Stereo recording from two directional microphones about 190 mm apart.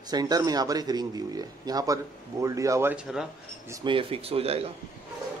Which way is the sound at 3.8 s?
30° right (ahead or behind).